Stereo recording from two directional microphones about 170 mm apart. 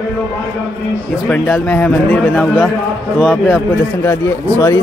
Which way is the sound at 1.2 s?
5° left (ahead or behind).